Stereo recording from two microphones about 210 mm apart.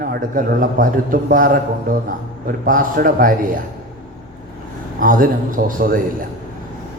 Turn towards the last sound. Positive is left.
turn(degrees=-40)  # may be behind; listen again after turning